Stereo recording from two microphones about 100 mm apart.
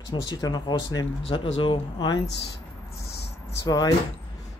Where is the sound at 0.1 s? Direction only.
45° left (ahead or behind).